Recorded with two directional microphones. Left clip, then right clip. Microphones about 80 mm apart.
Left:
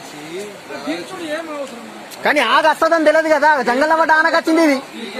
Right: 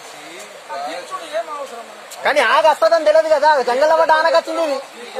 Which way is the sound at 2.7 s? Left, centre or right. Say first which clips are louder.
Even; left.